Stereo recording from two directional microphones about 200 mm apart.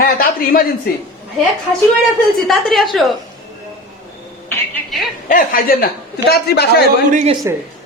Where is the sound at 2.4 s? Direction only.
Centre (ahead or behind).